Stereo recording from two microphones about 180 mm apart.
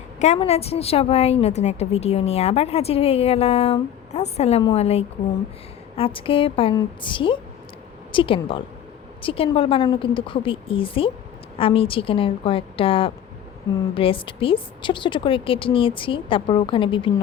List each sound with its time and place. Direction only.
0.2 s a woman's voice: 35° left (ahead or behind)